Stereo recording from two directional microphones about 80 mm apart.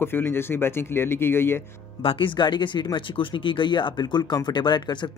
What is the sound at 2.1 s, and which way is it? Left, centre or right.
Speech, left.